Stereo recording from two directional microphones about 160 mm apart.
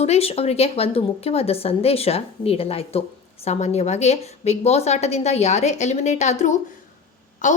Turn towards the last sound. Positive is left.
turn(degrees=50)  # may be behind; listen again after turning